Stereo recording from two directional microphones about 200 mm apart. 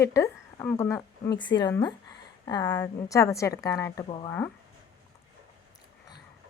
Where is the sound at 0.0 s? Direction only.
15° left (ahead or behind).